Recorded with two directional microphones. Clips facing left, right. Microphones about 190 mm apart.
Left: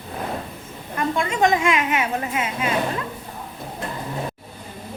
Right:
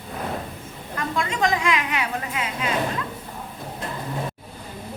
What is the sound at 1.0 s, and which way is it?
A woman's voice, 25° left (ahead or behind).